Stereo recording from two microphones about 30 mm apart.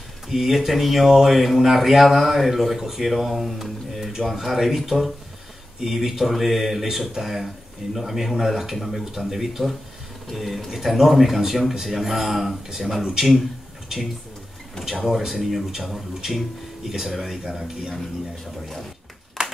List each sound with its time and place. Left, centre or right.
0.3 s speech: centre
14.9 s speech: centre
19.4 s clapping: right